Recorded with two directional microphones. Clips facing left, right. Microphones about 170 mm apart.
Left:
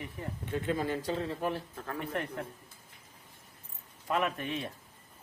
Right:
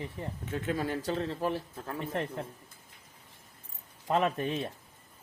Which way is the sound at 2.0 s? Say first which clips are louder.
Right 2 dB; 25° right (ahead or behind).